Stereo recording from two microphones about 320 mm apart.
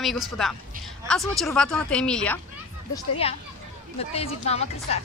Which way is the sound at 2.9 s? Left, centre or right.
Centre.